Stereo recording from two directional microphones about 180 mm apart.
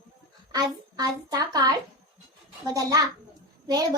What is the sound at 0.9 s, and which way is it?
A child's voice, 20° right (ahead or behind).